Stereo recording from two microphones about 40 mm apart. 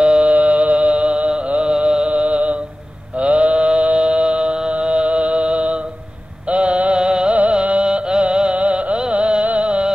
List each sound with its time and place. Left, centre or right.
0.0 s music: right
0.3 s music: right
3.2 s mantra: right
4.6 s music: right